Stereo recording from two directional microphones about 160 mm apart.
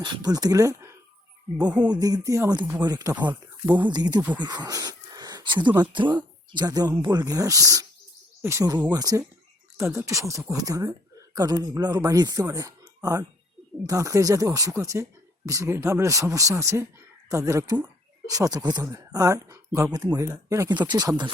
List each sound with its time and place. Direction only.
0.0 s speech: 25° right (ahead or behind); by 1.9 s 10° right (ahead or behind)
1.9 s speech: 25° right (ahead or behind)